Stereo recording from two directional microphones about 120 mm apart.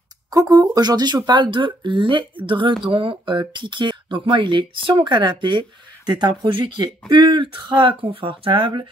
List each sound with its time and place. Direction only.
0.3 s speech: 30° right (ahead or behind)